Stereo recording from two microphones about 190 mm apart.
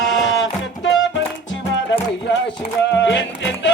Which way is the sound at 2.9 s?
70° left (ahead or behind).